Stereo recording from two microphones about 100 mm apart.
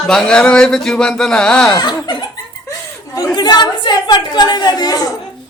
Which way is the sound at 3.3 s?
45° left (ahead or behind).